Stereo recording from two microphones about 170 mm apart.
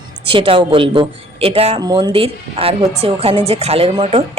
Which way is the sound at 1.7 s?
25° right (ahead or behind).